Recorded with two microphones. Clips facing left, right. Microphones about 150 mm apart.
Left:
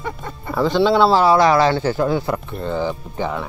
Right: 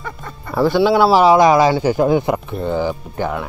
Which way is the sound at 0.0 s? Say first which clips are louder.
Left 2 dB; 20° left (ahead or behind).